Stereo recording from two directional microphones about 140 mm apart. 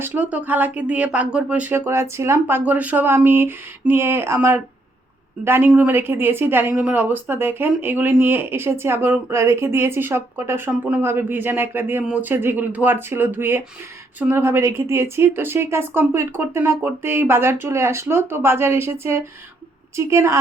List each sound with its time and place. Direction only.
0.0 s a woman's voice: 10° right (ahead or behind)